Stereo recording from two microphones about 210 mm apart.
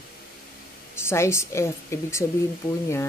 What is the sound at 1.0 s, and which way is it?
Speech, 10° left (ahead or behind).